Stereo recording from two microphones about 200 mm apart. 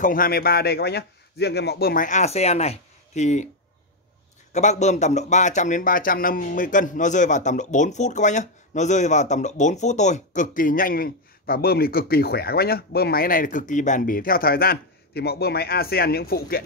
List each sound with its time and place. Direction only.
0.0 s speech: 45° left (ahead or behind)
4.5 s speech: 35° left (ahead or behind)